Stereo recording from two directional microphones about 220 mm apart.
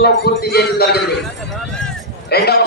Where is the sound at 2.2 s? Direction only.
45° left (ahead or behind).